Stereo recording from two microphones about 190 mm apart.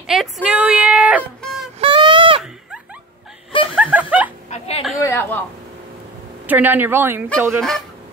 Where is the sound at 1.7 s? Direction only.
25° right (ahead or behind).